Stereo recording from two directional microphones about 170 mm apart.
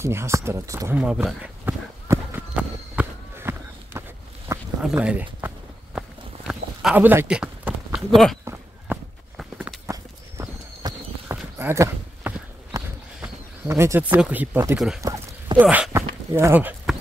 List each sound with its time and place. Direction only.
0.0 s speech: 15° right (ahead or behind)
0.9 s speech: 5° right (ahead or behind)
2.1 s horse: 15° right (ahead or behind)
3.0 s run: 15° right (ahead or behind)
4.7 s speech: 5° right (ahead or behind)
5.9 s a sound: 5° right (ahead or behind)
8.9 s walk: 15° right (ahead or behind)
9.4 s walk: centre (ahead or behind)
9.8 s horse: 20° right (ahead or behind)